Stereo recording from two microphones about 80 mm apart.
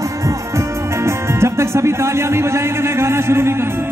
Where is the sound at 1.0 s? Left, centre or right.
Right.